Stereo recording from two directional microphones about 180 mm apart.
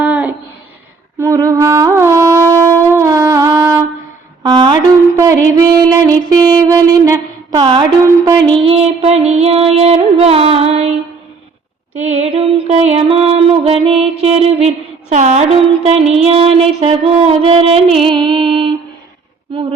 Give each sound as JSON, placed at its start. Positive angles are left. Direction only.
{"t": 0.0, "sound": "a sound", "side_deg": -10}
{"t": 1.2, "sound": "wind instrument", "side_deg": -15}
{"t": 4.4, "sound": "music", "side_deg": -25}
{"t": 5.2, "sound": "a sound", "side_deg": -20}
{"t": 8.3, "sound": "music", "side_deg": -20}
{"t": 8.7, "sound": "music", "side_deg": -35}
{"t": 11.9, "sound": "mantra", "side_deg": -35}
{"t": 13.8, "sound": "music", "side_deg": -35}